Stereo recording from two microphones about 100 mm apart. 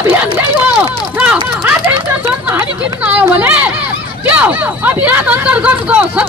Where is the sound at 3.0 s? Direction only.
15° right (ahead or behind).